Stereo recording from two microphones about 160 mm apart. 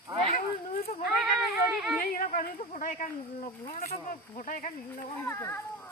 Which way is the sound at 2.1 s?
60° left (ahead or behind).